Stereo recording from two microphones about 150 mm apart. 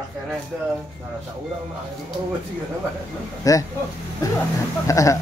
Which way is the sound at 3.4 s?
25° left (ahead or behind).